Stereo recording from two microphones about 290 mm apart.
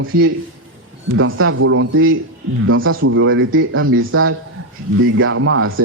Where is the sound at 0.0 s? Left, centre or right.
Right.